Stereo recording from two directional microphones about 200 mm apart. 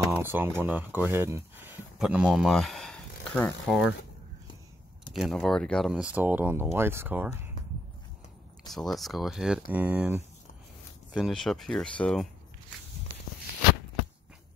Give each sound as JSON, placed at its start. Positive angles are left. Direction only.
{"t": 0.1, "sound": "a sound", "side_deg": -10}
{"t": 0.6, "sound": "speech", "side_deg": -10}
{"t": 5.1, "sound": "speech", "side_deg": 0}
{"t": 8.7, "sound": "speech", "side_deg": 0}